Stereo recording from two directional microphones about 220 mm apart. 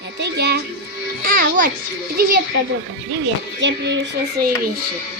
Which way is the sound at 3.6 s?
55° right (ahead or behind).